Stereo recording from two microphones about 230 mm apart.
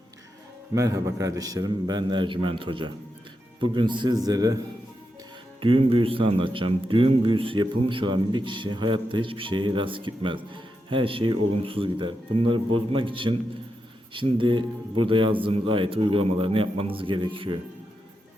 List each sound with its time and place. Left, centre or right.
0.7 s a man's voice: centre
5.5 s a man's voice: right